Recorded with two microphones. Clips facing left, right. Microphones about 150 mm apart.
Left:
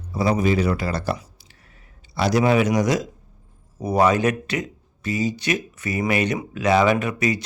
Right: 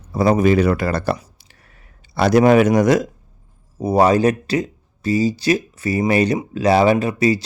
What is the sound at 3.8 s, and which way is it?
Speech, 30° right (ahead or behind).